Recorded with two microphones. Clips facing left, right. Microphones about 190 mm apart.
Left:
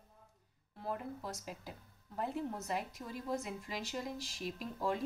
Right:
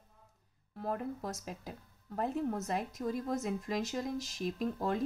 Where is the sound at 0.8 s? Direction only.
45° right (ahead or behind).